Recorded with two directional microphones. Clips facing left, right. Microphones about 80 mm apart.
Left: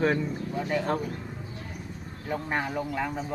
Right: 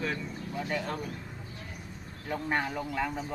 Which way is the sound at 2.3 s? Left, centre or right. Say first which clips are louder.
Left 1 dB; centre.